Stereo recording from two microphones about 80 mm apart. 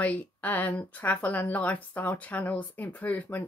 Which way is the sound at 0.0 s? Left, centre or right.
Centre.